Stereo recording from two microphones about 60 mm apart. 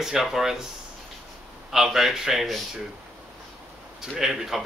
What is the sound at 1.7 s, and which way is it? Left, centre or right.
Speech, centre.